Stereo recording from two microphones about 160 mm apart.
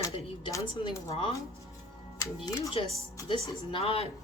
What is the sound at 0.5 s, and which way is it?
Speech, 25° left (ahead or behind).